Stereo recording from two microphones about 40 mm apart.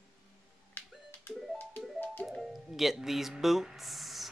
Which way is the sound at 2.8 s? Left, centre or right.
Centre.